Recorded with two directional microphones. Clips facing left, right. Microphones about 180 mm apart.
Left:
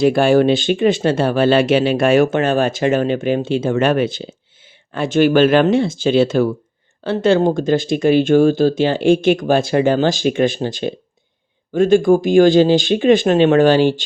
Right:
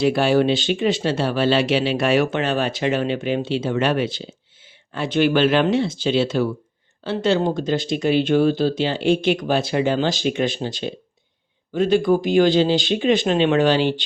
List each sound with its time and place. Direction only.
0.0 s speech: 50° left (ahead or behind)